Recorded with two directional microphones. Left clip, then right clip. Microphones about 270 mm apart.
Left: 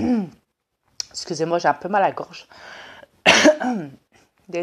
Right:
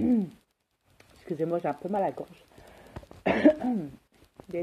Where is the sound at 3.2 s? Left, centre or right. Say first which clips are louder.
Left 9 dB; left.